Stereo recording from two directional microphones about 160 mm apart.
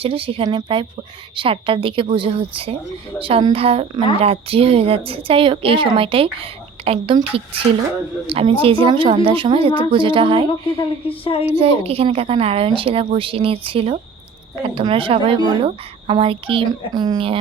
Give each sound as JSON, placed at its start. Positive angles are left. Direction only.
{"t": 0.0, "sound": "a woman's voice", "side_deg": -35}
{"t": 11.2, "sound": "a woman's voice", "side_deg": 35}
{"t": 11.5, "sound": "a woman's voice", "side_deg": -35}